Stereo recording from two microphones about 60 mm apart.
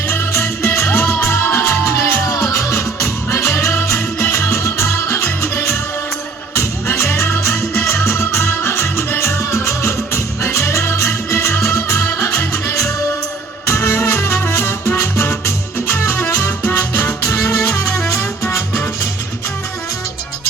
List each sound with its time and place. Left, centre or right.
0.1 s music: left